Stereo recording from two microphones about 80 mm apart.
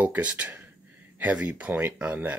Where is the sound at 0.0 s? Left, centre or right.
Centre.